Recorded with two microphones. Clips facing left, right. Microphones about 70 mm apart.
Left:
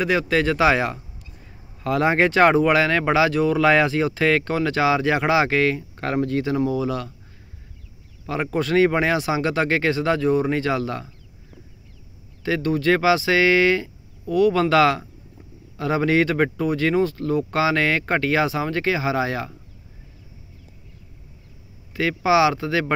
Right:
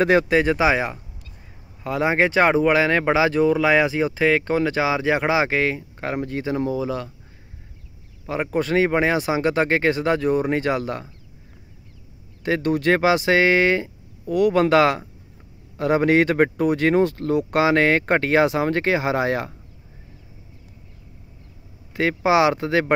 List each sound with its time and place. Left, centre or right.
0.0 s speech: right
0.3 s speech: right
8.3 s speech: right
12.4 s speech: right
21.9 s speech: right